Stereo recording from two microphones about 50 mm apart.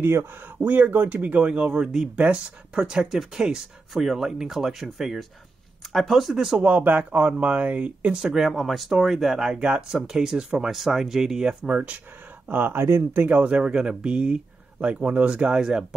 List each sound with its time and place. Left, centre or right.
0.0 s speech: right
0.6 s speech: right
1.4 s speech: right
3.9 s speech: centre
6.8 s speech: right; by 8.5 s centre
8.5 s speech: centre
9.5 s speech: right
11.6 s speech: right
13.5 s speech: centre